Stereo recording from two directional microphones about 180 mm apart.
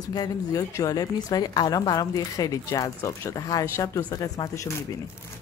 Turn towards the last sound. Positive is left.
turn(degrees=20)  # may be behind; listen again after turning